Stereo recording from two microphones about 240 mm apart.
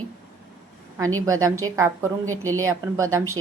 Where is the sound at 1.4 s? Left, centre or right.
Centre.